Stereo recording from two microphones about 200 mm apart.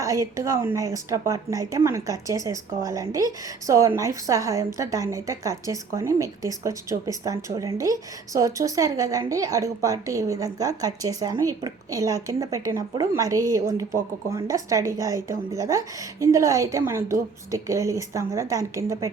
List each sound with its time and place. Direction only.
0.0 s a woman's voice: 15° right (ahead or behind)